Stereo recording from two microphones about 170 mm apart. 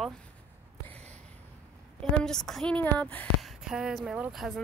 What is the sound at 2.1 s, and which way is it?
A woman's voice, 5° left (ahead or behind).